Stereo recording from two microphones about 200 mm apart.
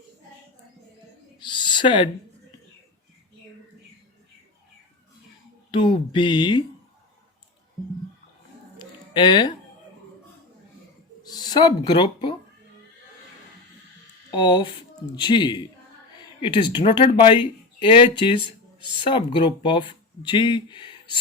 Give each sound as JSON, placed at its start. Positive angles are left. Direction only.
{"t": 1.4, "sound": "owl", "side_deg": 20}
{"t": 5.7, "sound": "speech", "side_deg": 25}
{"t": 8.8, "sound": "a sound", "side_deg": 20}
{"t": 11.2, "sound": "speech", "side_deg": 20}
{"t": 14.3, "sound": "speech", "side_deg": 20}
{"t": 18.3, "sound": "a sound", "side_deg": -25}
{"t": 19.0, "sound": "speech", "side_deg": 25}